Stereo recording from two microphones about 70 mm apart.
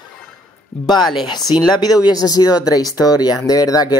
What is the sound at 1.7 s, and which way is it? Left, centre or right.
Speech, left.